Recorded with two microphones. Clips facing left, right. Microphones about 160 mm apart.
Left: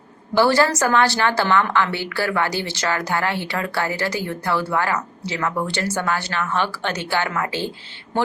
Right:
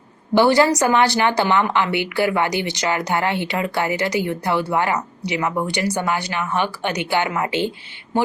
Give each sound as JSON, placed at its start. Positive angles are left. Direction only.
{"t": 0.3, "sound": "speech", "side_deg": -20}